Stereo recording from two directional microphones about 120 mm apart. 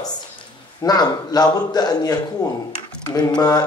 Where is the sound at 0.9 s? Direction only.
35° left (ahead or behind).